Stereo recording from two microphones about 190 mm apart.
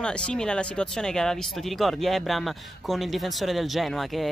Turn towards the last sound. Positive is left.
turn(degrees=0)  # may be behind; listen again after turning